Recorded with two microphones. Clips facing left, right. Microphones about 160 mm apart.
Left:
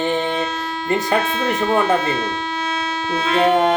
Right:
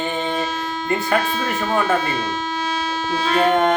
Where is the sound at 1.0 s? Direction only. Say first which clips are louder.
Left 1 dB; 20° left (ahead or behind).